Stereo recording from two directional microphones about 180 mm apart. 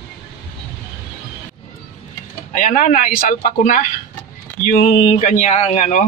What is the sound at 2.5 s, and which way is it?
Speech, 45° left (ahead or behind).